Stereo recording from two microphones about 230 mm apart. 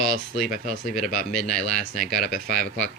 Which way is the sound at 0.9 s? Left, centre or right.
Centre.